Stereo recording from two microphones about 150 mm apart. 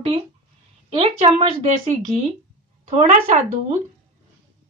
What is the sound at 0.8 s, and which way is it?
Speech, 40° right (ahead or behind).